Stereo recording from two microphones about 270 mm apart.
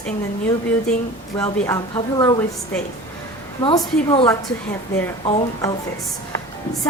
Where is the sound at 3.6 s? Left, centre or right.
Centre.